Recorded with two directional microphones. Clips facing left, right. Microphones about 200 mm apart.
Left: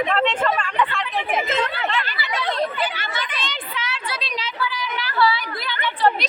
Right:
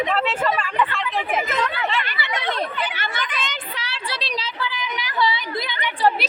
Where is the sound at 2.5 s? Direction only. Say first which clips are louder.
Left 2 dB; 50° right (ahead or behind).